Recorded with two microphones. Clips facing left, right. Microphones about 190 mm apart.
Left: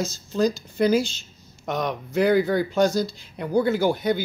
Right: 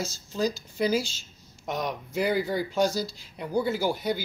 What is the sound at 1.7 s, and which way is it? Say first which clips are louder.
Speech: left 4 dB; 60° left (ahead or behind).